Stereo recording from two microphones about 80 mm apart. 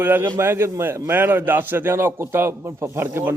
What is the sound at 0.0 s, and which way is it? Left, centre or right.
A man's voice, right.